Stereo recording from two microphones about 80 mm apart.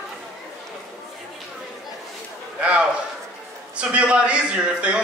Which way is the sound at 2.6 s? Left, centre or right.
Centre.